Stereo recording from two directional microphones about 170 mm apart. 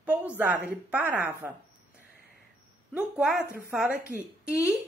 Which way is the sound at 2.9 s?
5° right (ahead or behind).